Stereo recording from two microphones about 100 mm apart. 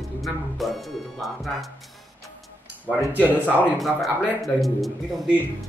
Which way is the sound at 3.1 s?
15° right (ahead or behind).